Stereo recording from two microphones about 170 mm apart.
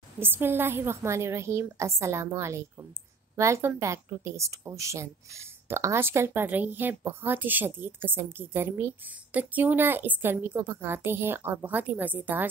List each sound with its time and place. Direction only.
0.2 s a woman's voice: 10° right (ahead or behind)